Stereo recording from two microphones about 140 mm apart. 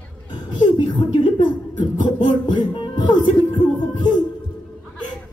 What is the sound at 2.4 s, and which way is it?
Music, 30° left (ahead or behind).